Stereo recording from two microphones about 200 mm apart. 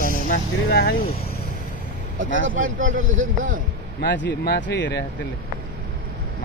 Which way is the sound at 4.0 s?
60° left (ahead or behind).